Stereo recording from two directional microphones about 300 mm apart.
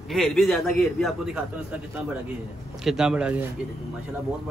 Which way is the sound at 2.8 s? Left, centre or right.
Centre.